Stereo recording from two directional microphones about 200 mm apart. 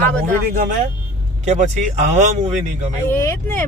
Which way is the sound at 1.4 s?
35° right (ahead or behind).